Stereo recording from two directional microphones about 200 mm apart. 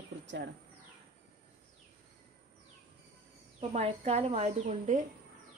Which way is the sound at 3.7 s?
35° right (ahead or behind).